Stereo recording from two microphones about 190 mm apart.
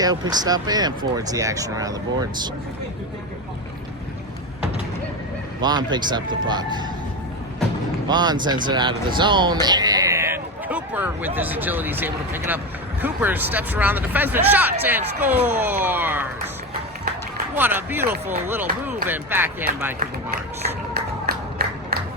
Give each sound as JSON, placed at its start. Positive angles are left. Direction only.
{"t": 0.0, "sound": "speech", "side_deg": -20}
{"t": 5.5, "sound": "speech", "side_deg": -20}
{"t": 8.0, "sound": "speech", "side_deg": -20}
{"t": 17.5, "sound": "speech", "side_deg": -10}
{"t": 21.2, "sound": "crowd", "side_deg": -55}